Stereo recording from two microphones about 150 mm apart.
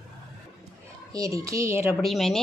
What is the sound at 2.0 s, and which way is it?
Speech, centre (ahead or behind).